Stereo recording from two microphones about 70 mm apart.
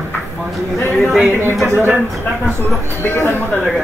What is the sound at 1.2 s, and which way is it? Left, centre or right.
Speech, right.